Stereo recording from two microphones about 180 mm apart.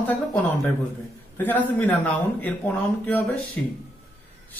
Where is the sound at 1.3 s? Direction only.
10° left (ahead or behind).